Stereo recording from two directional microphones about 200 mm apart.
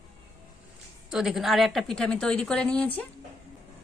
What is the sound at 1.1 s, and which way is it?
A woman's voice, 5° right (ahead or behind).